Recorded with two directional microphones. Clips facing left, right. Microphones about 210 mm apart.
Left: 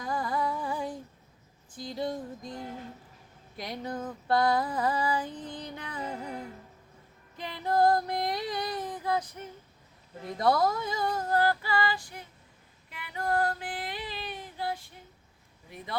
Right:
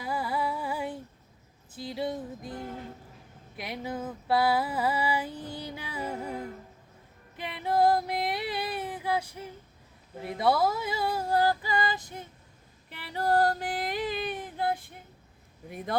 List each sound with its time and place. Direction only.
0.0 s music: 5° right (ahead or behind)
3.6 s female singing: 5° right (ahead or behind)
7.3 s female singing: 5° right (ahead or behind); by 12.2 s 20° right (ahead or behind)
12.9 s female singing: 35° right (ahead or behind); by 14.9 s 55° right (ahead or behind)